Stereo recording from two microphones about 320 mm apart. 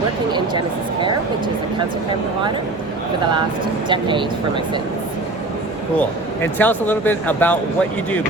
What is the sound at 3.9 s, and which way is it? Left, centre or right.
Speech, centre.